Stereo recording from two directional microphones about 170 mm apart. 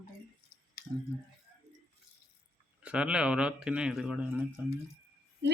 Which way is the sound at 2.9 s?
5° right (ahead or behind).